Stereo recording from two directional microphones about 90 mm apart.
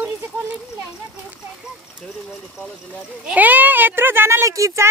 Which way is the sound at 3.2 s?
20° right (ahead or behind).